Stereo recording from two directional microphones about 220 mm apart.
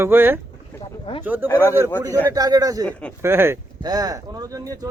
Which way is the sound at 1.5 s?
10° left (ahead or behind).